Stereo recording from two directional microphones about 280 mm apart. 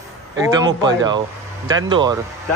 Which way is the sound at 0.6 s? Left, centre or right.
Centre.